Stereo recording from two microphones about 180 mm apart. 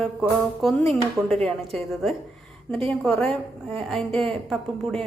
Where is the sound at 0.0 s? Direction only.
Centre (ahead or behind).